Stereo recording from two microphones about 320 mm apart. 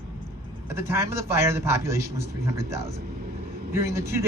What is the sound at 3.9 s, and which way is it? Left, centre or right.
Speech, centre.